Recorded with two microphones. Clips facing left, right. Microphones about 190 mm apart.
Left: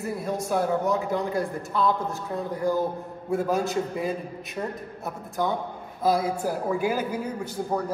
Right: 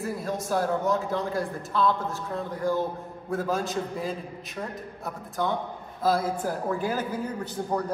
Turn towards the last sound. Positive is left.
turn(degrees=5)  # may be behind; listen again after turning